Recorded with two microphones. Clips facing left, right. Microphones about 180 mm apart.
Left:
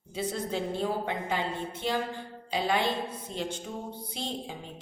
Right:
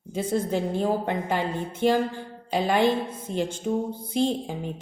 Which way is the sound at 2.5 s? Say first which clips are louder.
Right 5 dB; 50° right (ahead or behind).